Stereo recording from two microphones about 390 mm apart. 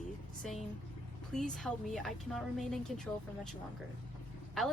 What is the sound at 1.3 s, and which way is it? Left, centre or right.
A woman's voice, centre.